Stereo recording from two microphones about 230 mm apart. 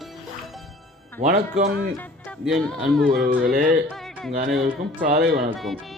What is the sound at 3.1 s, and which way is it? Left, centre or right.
Speech, right.